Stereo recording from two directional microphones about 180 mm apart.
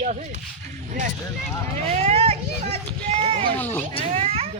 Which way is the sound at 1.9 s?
35° right (ahead or behind).